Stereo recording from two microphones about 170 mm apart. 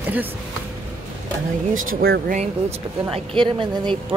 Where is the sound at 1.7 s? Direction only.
60° right (ahead or behind).